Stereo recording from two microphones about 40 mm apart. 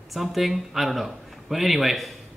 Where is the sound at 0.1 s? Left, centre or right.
Centre.